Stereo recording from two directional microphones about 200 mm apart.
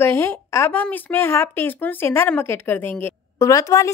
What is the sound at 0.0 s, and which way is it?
A woman's voice, 10° left (ahead or behind).